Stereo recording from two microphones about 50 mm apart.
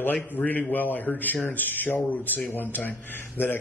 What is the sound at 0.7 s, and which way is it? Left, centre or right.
A man's voice, left.